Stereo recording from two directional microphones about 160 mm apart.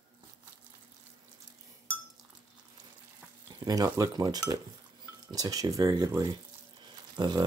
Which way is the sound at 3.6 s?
25° right (ahead or behind).